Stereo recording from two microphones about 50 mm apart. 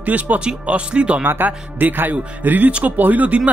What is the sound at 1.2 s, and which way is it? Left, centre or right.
Speech, right.